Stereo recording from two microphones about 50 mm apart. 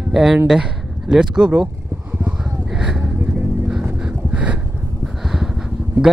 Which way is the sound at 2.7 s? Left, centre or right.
Centre.